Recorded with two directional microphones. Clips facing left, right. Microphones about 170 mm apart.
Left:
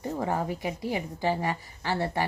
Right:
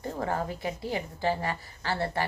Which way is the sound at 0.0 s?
15° left (ahead or behind).